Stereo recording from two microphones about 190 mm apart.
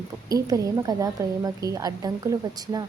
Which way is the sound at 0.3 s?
20° right (ahead or behind).